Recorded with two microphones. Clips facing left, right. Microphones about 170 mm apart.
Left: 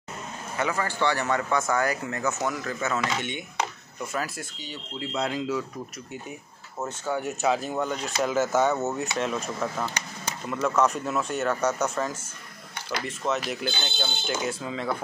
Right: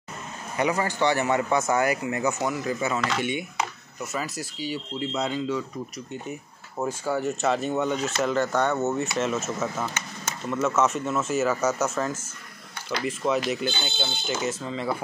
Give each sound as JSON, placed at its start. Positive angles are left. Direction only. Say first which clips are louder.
{"t": 0.6, "sound": "speech", "louder": "right 3 dB", "side_deg": -15}
{"t": 7.1, "sound": "speech", "louder": "even", "side_deg": 0}